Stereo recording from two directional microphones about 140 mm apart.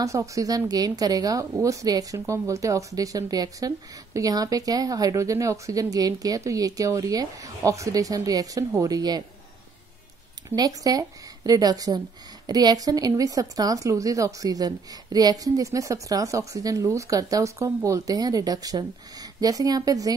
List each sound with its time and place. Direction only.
0.0 s speech: 20° right (ahead or behind)
10.5 s speech: 25° right (ahead or behind)